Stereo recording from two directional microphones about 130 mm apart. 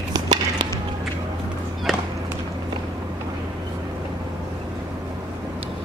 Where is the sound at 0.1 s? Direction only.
35° right (ahead or behind).